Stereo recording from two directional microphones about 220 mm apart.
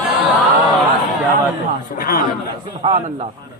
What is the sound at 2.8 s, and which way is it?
Speech, 25° right (ahead or behind).